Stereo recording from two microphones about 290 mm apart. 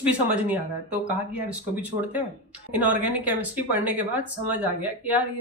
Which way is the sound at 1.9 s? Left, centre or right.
Right.